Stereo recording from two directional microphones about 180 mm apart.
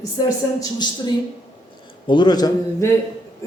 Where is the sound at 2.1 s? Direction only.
25° left (ahead or behind).